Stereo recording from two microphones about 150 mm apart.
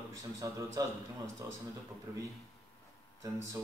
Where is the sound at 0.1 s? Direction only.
20° right (ahead or behind).